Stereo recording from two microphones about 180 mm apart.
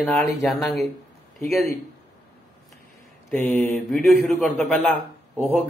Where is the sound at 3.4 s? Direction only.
10° left (ahead or behind).